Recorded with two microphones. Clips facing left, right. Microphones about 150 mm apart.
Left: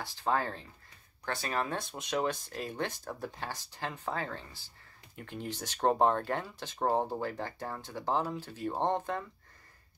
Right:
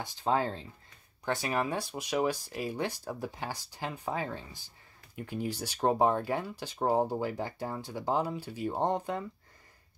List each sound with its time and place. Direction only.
0.0 s speech: 15° right (ahead or behind)